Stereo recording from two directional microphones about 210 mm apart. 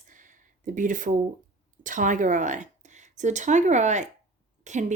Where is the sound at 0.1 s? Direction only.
40° right (ahead or behind).